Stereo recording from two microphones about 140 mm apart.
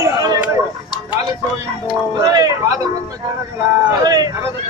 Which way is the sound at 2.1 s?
30° right (ahead or behind).